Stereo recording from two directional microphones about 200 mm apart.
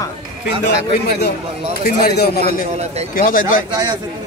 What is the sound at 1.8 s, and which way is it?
A man's voice, 50° left (ahead or behind).